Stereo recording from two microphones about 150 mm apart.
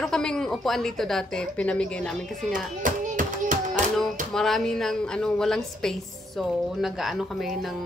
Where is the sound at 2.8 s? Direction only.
60° right (ahead or behind).